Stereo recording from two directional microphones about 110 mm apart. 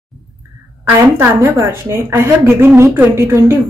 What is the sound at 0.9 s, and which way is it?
A woman's voice, 25° right (ahead or behind).